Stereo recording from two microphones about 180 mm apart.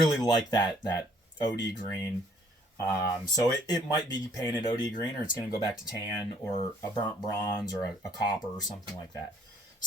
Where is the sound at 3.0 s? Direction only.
20° left (ahead or behind).